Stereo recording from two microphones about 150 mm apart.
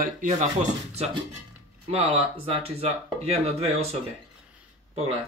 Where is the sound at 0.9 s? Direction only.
45° right (ahead or behind).